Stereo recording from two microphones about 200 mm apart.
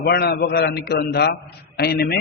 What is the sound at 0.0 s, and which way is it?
A man's voice, 55° left (ahead or behind).